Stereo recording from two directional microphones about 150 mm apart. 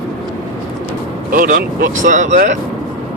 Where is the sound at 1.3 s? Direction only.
70° right (ahead or behind).